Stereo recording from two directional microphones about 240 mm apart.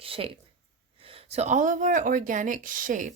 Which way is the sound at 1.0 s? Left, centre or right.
Right.